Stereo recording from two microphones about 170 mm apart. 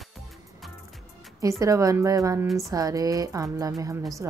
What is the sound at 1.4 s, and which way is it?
Speech, 20° right (ahead or behind).